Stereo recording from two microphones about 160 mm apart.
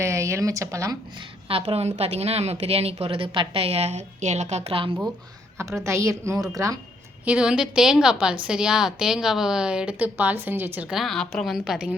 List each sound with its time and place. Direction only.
0.0 s speech: 20° right (ahead or behind)
1.5 s a woman's voice: 35° right (ahead or behind)
5.5 s a woman's voice: 15° right (ahead or behind)
7.3 s a woman's voice: 5° right (ahead or behind)
10.8 s a woman's voice: centre (ahead or behind)